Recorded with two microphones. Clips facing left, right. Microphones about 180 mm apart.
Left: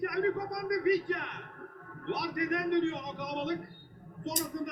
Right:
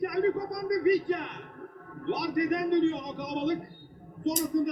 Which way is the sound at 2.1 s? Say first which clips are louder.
Right 5 dB; 15° right (ahead or behind).